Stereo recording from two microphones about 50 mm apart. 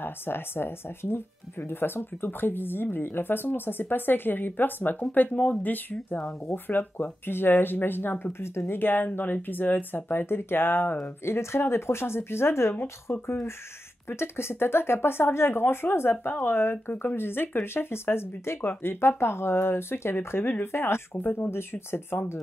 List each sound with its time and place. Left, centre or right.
0.0 s speech: left
5.0 s speech: left
11.2 s speech: left
21.2 s speech: left